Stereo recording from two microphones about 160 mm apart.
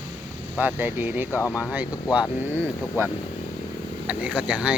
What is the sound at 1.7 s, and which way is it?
Speech, 10° right (ahead or behind).